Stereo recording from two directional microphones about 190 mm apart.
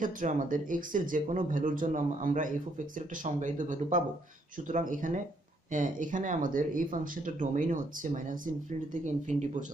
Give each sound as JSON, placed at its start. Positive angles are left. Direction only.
{"t": 0.0, "sound": "speech", "side_deg": -45}